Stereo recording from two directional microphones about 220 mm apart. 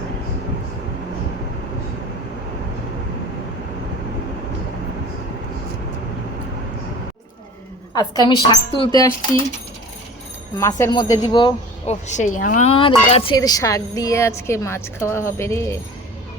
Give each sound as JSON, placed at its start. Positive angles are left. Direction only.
{"t": 7.9, "sound": "a woman's voice", "side_deg": 20}
{"t": 10.6, "sound": "a woman's voice", "side_deg": 15}
{"t": 12.0, "sound": "a woman's voice", "side_deg": 35}